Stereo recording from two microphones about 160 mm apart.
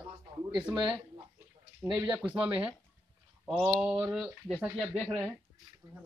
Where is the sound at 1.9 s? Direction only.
5° right (ahead or behind).